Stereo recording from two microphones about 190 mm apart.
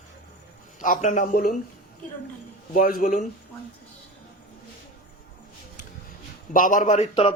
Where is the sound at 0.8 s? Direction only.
45° left (ahead or behind).